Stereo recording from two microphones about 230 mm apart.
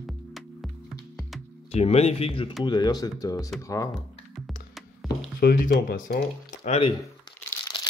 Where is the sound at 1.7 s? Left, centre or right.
Left.